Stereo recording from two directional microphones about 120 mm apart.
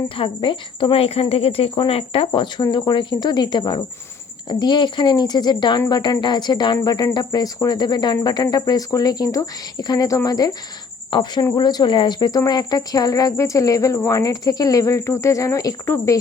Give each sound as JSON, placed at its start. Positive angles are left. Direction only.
{"t": 0.2, "sound": "speech", "side_deg": 45}